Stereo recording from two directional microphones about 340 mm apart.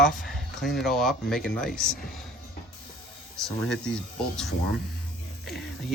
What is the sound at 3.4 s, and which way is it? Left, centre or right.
Speech, centre.